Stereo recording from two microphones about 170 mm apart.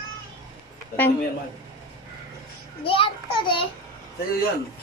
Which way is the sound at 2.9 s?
30° left (ahead or behind).